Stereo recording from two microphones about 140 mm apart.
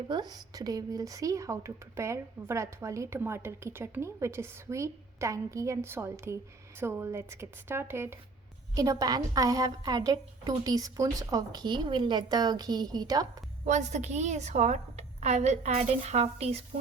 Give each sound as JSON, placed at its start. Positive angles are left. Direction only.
{"t": 0.1, "sound": "speech", "side_deg": -30}
{"t": 13.7, "sound": "a woman's voice", "side_deg": -55}